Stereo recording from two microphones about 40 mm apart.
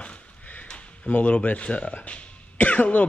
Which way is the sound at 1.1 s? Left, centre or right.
Left.